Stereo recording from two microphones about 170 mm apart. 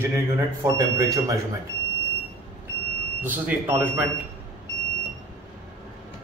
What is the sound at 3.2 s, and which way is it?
Speech, 10° right (ahead or behind).